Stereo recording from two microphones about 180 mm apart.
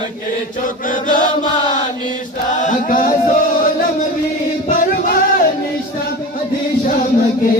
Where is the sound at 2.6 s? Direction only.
50° left (ahead or behind).